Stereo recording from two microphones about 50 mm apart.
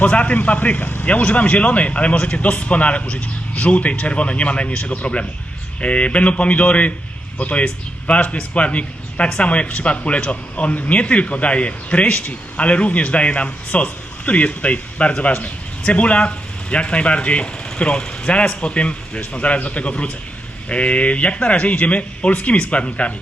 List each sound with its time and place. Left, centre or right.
0.0 s speech: left